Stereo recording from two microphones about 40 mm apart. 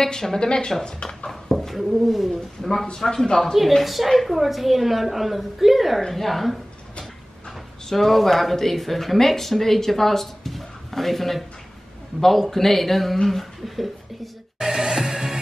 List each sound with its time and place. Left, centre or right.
0.0 s speech: centre
1.7 s speech: centre
7.9 s speech: centre
14.6 s music: centre